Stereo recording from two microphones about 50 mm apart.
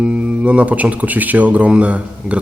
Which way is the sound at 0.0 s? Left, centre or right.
Right.